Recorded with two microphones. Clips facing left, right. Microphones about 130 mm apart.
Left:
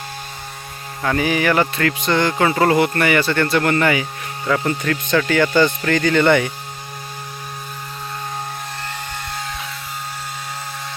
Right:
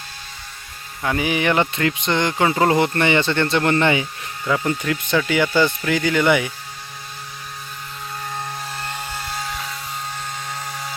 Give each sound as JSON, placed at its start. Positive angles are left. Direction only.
{"t": 1.0, "sound": "speech", "side_deg": -15}
{"t": 4.4, "sound": "speech", "side_deg": -10}